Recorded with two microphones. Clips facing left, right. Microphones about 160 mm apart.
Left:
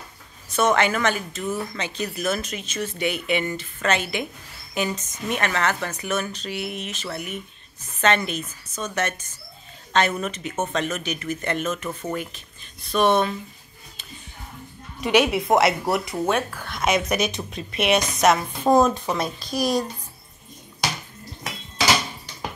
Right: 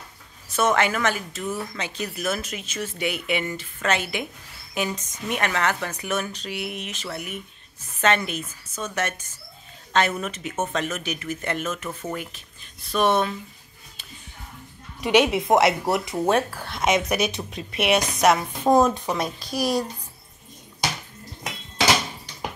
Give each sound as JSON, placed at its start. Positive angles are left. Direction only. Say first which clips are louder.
{"t": 0.5, "sound": "speech", "louder": "left 1 dB", "side_deg": -5}
{"t": 15.0, "sound": "speech", "louder": "even", "side_deg": -15}
{"t": 16.3, "sound": "speech", "louder": "right 5 dB", "side_deg": -35}
{"t": 17.1, "sound": "speech", "louder": "even", "side_deg": -10}